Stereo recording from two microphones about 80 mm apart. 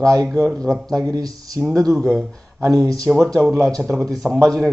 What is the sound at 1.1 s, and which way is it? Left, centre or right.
Speech, right.